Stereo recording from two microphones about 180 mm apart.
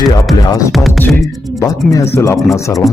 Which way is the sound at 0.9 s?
10° left (ahead or behind).